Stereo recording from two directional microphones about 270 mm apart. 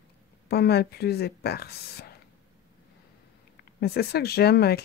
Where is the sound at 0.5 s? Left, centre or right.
Left.